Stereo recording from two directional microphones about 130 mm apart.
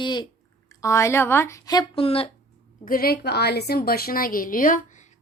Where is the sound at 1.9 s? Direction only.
45° left (ahead or behind).